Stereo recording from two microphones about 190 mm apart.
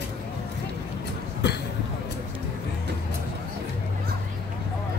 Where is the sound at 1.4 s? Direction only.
65° left (ahead or behind).